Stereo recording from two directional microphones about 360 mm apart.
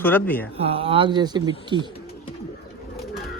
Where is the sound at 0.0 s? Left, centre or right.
Centre.